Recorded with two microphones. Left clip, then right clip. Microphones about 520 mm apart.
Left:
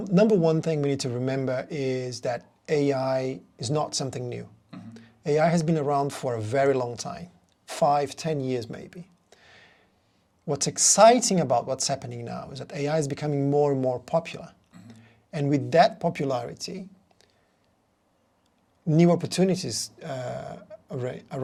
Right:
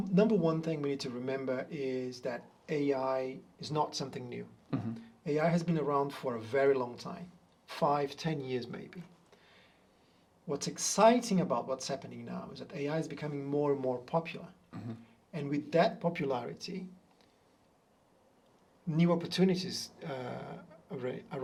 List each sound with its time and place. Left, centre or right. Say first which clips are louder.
0.1 s speech: left 8 dB; left
14.7 s a sound: right 5 dB; right
15.3 s speech: left 9 dB; left
18.9 s speech: left 9 dB; left